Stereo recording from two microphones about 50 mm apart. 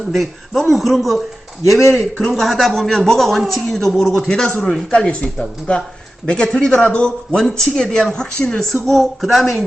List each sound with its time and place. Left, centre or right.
0.1 s a man's voice: centre
1.9 s a man's voice: centre
2.2 s a man's voice: centre
4.3 s speech: centre